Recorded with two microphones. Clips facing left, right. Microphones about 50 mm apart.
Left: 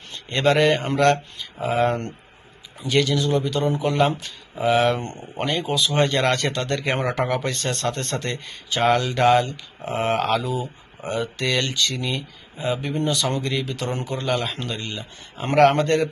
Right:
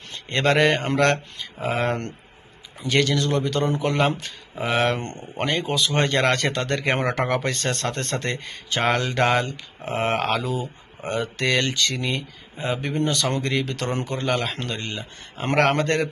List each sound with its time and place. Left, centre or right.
0.3 s speech: right
5.0 s speech: centre
5.4 s speech: right